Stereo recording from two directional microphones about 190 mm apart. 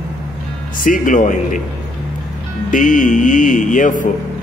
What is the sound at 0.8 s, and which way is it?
Music, 45° left (ahead or behind).